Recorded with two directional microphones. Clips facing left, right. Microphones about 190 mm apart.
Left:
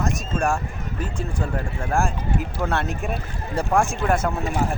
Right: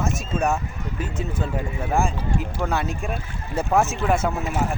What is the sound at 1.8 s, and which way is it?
Speech, centre (ahead or behind).